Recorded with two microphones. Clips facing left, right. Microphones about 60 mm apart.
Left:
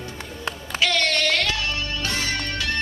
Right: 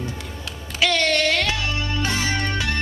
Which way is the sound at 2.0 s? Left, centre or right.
Right.